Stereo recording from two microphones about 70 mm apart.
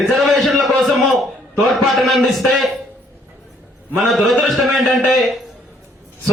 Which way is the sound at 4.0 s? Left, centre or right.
Centre.